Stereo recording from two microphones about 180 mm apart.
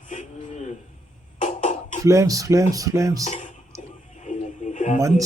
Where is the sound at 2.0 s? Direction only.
15° right (ahead or behind).